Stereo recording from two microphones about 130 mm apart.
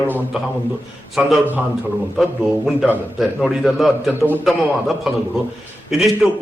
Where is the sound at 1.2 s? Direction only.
10° right (ahead or behind).